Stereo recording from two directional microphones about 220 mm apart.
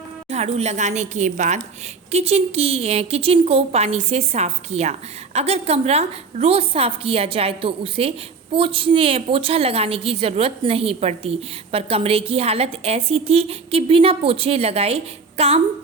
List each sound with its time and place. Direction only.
0.3 s a woman's voice: 30° right (ahead or behind)